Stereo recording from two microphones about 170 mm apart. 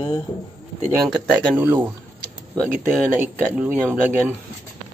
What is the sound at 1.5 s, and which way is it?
Speech, 10° right (ahead or behind).